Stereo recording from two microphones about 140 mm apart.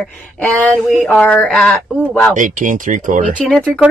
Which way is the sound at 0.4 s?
10° left (ahead or behind).